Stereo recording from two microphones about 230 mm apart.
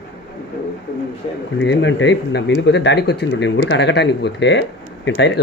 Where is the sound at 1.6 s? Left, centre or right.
Left.